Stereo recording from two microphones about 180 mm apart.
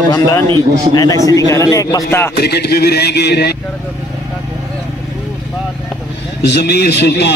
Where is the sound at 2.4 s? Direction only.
65° left (ahead or behind).